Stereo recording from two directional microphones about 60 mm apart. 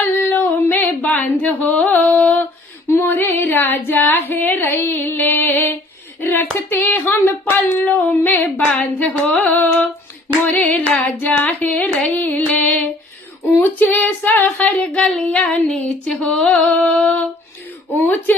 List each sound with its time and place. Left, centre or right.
0.0 s female singing: left
1.0 s a sound: left
2.9 s female singing: left
6.2 s a sound: left
8.6 s carnatic music: left
13.7 s carnatic music: left
14.9 s child singing: centre
15.8 s carnatic music: left